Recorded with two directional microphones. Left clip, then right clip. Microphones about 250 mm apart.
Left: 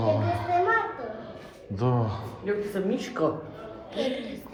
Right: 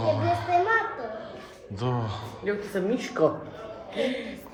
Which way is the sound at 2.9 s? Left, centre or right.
Right.